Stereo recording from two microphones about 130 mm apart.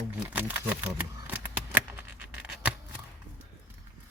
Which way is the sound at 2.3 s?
10° right (ahead or behind).